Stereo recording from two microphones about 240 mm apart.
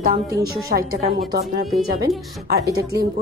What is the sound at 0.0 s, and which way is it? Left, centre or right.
Speech, right.